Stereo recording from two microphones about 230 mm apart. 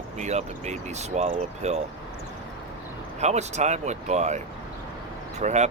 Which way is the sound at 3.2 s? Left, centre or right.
Right.